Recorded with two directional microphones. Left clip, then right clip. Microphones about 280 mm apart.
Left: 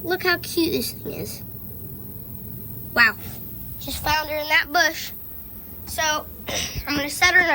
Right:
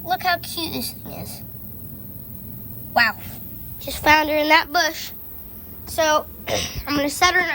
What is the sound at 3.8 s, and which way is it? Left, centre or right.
Speech, right.